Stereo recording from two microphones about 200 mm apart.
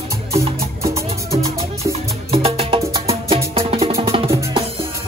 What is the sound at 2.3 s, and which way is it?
Music, 30° right (ahead or behind).